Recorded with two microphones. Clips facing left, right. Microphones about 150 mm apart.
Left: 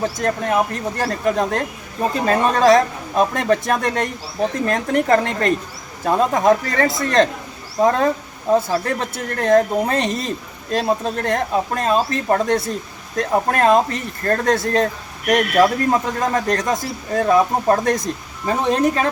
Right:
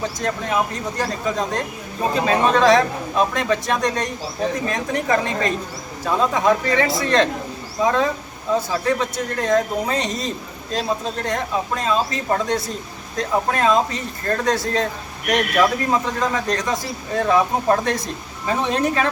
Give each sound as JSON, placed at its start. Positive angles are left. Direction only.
{"t": 0.0, "sound": "a woman's voice", "side_deg": 50}
{"t": 17.2, "sound": "speech", "side_deg": 35}